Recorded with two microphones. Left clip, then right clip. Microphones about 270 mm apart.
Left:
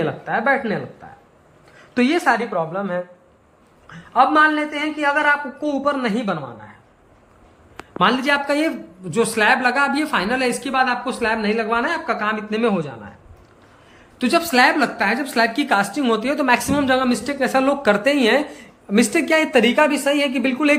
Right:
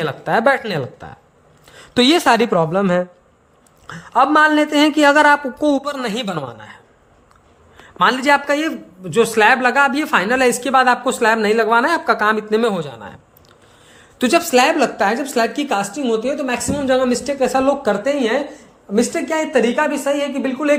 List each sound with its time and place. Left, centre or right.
0.0 s a man's voice: right
1.9 s a man's voice: right
3.8 s a man's voice: right
7.9 s speech: centre
14.2 s speech: centre
18.0 s speech: centre